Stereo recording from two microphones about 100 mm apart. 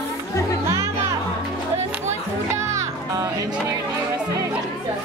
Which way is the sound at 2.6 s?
30° right (ahead or behind).